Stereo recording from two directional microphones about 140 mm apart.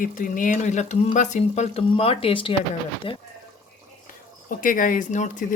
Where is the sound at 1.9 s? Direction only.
45° left (ahead or behind).